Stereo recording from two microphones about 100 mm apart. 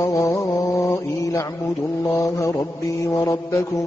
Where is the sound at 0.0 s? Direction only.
30° left (ahead or behind).